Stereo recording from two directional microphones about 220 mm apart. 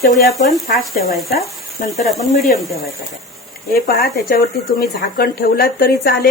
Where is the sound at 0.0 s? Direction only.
45° left (ahead or behind).